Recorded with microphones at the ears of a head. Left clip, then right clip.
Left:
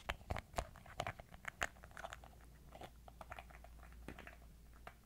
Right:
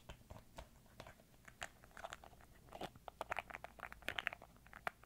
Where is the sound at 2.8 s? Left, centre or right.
Right.